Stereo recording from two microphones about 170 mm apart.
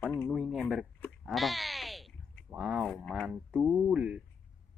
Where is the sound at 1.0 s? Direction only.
Centre (ahead or behind).